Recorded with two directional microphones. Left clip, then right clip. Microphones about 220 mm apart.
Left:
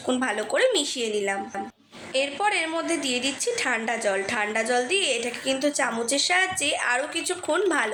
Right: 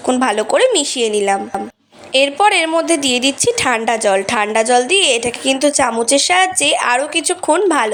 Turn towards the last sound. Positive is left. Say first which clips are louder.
# right 10 dB
turn(degrees=-35)  # may be behind; listen again after turning